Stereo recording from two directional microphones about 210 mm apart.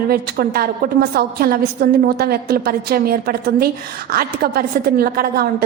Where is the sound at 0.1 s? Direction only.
45° right (ahead or behind).